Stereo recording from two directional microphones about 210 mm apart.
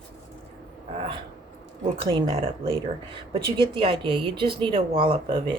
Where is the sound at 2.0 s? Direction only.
25° right (ahead or behind).